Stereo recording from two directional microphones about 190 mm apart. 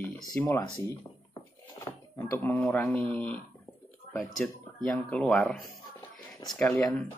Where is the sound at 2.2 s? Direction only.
10° left (ahead or behind).